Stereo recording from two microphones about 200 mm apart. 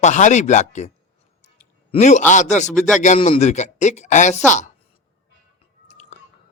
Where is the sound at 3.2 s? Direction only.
30° left (ahead or behind).